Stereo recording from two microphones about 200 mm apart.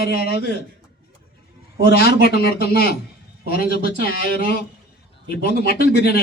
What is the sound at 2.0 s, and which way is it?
Speech, 50° left (ahead or behind).